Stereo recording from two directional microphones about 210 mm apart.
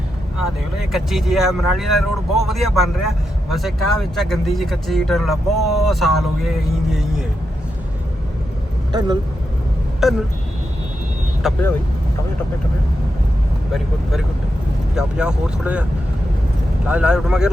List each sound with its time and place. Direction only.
0.9 s speech: centre (ahead or behind)
8.9 s speech: 20° right (ahead or behind)
10.0 s speech: centre (ahead or behind)
11.4 s speech: centre (ahead or behind)
14.9 s speech: 5° right (ahead or behind)